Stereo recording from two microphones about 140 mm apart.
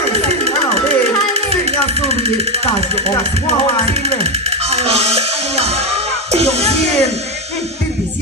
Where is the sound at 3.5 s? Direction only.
45° right (ahead or behind).